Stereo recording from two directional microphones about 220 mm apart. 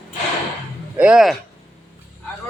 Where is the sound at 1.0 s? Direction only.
5° right (ahead or behind).